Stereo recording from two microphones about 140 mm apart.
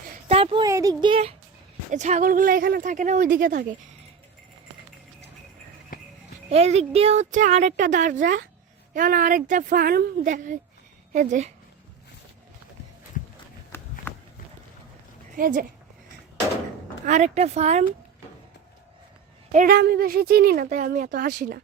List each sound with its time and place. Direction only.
0.3 s a sound: 45° right (ahead or behind)
0.6 s speech: 25° right (ahead or behind)
1.9 s speech: 55° right (ahead or behind)
2.2 s speech: 80° right
5.9 s clip-clop: 85° left
6.5 s speech: 50° right (ahead or behind)
13.7 s walk: 15° left (ahead or behind)
15.4 s speech: 75° right (ahead or behind)
17.1 s speech: 55° right (ahead or behind)
19.5 s speech: 75° right (ahead or behind)